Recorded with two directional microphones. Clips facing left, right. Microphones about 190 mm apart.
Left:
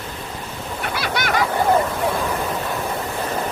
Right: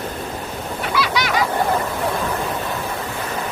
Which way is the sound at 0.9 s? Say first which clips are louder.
Right 2 dB; 50° left (ahead or behind).